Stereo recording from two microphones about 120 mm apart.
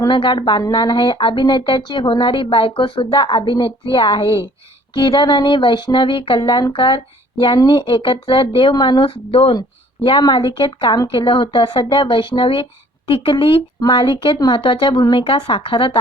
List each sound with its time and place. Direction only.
0.1 s speech: 40° left (ahead or behind)